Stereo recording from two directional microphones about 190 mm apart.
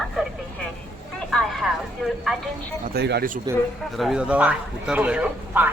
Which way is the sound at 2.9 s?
60° right (ahead or behind).